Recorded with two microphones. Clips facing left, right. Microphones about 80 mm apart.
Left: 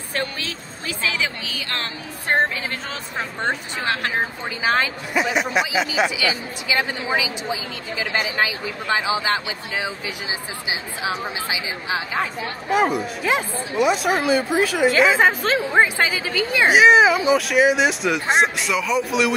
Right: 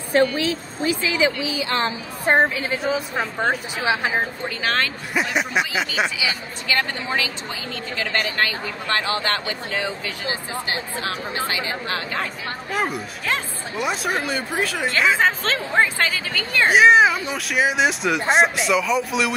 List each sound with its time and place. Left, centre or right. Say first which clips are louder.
0.8 s a woman's voice: right 5 dB; centre
4.6 s speech: left 3 dB; centre
5.1 s speech: left 2 dB; centre
6.7 s speech: left 1 dB; centre